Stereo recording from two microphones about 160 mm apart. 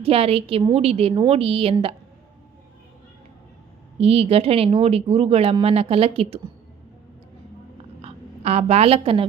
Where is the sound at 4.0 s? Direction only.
40° right (ahead or behind).